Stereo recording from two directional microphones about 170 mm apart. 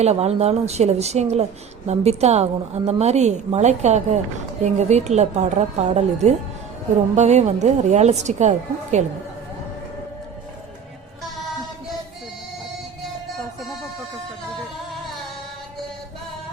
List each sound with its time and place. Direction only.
0.0 s a woman's voice: 40° right (ahead or behind)